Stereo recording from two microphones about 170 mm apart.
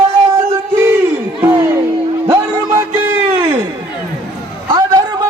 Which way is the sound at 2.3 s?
15° right (ahead or behind).